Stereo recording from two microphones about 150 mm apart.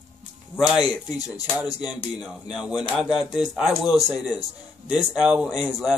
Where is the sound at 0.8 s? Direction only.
25° left (ahead or behind).